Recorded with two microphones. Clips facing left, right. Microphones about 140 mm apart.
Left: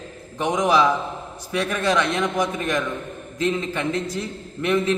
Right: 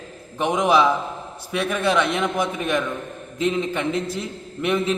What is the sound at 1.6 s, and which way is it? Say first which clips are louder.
Speech: right 1 dB; 5° right (ahead or behind).